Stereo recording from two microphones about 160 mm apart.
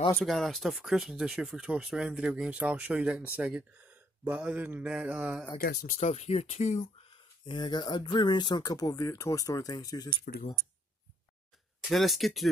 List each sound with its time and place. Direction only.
0.1 s speech: centre (ahead or behind)
4.2 s mantra: 10° right (ahead or behind)
5.6 s speech: 75° left (ahead or behind)
5.9 s speech: 40° left (ahead or behind); by 10.0 s 25° left (ahead or behind)
10.2 s speech: 65° left (ahead or behind)
11.9 s speech: centre (ahead or behind)